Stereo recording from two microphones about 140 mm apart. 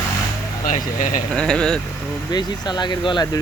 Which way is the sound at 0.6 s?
65° left (ahead or behind).